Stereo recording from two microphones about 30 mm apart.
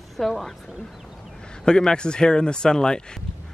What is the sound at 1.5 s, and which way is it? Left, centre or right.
Speech, left.